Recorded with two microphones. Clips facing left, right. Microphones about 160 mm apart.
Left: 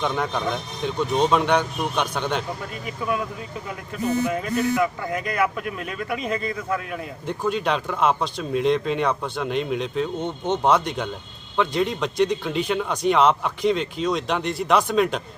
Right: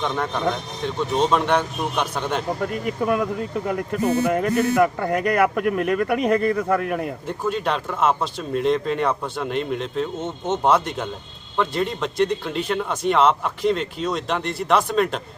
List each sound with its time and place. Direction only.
0.0 s speech: centre (ahead or behind)
2.6 s speech: 55° right (ahead or behind)
7.3 s speech: centre (ahead or behind)